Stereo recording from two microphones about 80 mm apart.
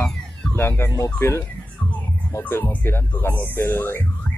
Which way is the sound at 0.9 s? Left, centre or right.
Left.